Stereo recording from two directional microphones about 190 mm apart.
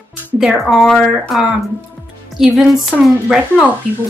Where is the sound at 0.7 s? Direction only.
Centre (ahead or behind).